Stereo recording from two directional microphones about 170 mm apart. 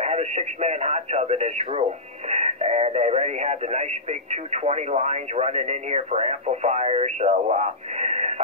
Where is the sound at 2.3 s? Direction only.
40° right (ahead or behind).